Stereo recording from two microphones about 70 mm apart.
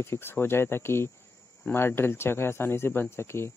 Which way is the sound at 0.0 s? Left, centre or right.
Left.